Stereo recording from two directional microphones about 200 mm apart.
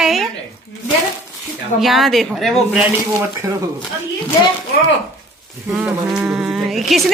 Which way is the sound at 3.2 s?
15° right (ahead or behind).